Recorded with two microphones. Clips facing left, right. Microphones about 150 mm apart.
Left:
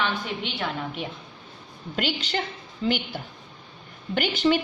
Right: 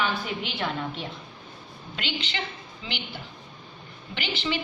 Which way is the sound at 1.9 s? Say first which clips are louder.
Left 6 dB; 45° left (ahead or behind).